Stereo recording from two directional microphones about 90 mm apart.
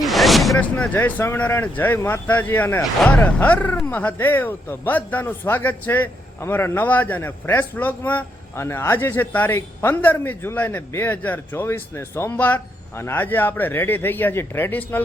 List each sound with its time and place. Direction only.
0.0 s a sound: centre (ahead or behind)
0.6 s a man's voice: 15° left (ahead or behind)
8.5 s a man's voice: 30° left (ahead or behind)